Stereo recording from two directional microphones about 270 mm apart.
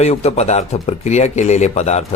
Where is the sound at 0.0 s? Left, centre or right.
Left.